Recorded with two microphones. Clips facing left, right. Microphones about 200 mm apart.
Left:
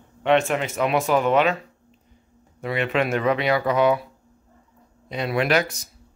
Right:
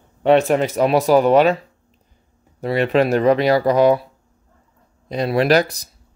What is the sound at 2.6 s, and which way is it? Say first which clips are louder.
Speech: right 6 dB; 35° right (ahead or behind).